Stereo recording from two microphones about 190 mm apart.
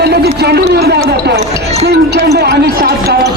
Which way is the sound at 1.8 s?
60° right (ahead or behind).